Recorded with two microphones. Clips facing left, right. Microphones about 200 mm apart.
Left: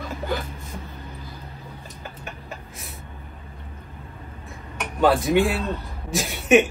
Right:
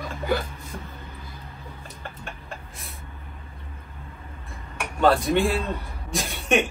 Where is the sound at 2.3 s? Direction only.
Centre (ahead or behind).